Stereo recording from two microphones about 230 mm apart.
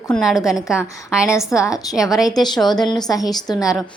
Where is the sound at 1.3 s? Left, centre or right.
Centre.